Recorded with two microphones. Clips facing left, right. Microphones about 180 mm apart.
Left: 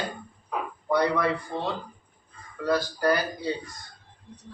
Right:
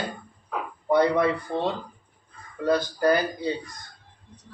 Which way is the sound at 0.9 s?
20° right (ahead or behind).